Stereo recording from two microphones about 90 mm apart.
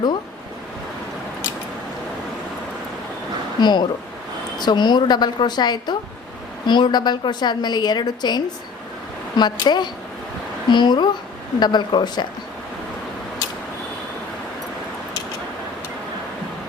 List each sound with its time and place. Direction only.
3.6 s a woman's voice: 55° left (ahead or behind)
9.4 s a woman's voice: 55° left (ahead or behind)